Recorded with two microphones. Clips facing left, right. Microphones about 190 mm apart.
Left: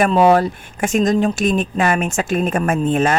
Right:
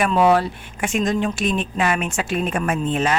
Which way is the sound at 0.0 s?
40° left (ahead or behind).